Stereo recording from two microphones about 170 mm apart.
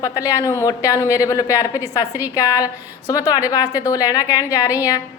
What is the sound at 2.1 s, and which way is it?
Speech, 10° right (ahead or behind).